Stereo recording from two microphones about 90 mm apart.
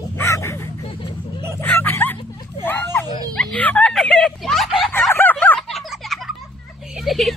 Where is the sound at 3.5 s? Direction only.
15° left (ahead or behind).